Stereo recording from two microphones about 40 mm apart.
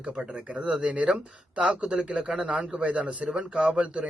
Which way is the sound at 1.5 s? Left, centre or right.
Right.